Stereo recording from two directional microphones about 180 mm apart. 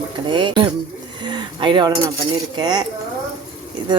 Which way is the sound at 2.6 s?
25° right (ahead or behind).